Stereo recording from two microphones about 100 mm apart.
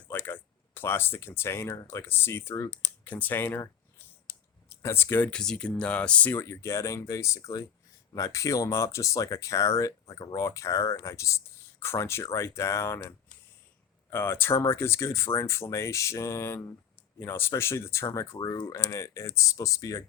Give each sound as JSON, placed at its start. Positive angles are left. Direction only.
{"t": 0.0, "sound": "speech", "side_deg": 20}
{"t": 4.7, "sound": "speech", "side_deg": 25}
{"t": 6.3, "sound": "speech", "side_deg": 25}